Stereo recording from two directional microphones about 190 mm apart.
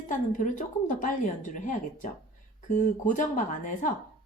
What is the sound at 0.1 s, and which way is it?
Speech, 40° left (ahead or behind).